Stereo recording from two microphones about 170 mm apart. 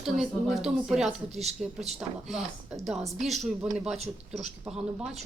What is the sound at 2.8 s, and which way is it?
Speech, centre (ahead or behind).